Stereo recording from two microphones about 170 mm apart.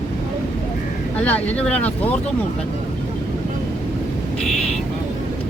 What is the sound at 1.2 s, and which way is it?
Speech, 10° left (ahead or behind).